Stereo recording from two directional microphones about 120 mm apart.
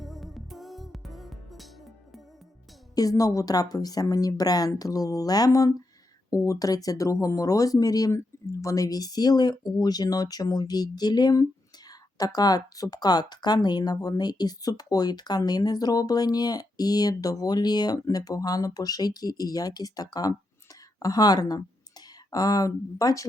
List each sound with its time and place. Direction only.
0.0 s music: centre (ahead or behind)
2.9 s speech: 30° left (ahead or behind)